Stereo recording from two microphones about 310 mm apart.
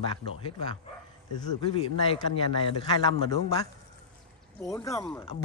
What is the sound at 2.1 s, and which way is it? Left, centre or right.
Speech, centre.